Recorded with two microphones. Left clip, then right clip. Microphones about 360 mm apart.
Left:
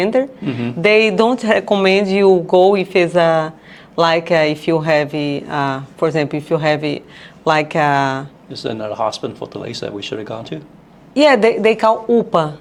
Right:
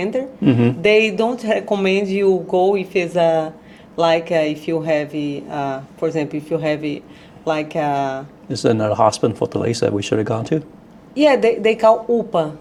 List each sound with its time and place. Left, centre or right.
0.0 s speech: left
0.4 s speech: right
0.8 s speech: left
8.5 s speech: right
11.1 s speech: left